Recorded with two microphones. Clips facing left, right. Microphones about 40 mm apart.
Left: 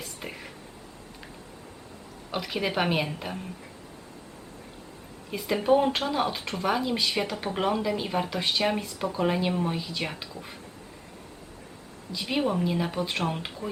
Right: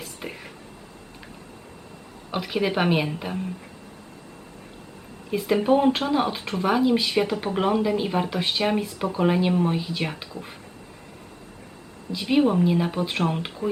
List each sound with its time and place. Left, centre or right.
0.0 s a sound: centre
2.3 s speech: centre
5.3 s speech: centre
12.1 s speech: centre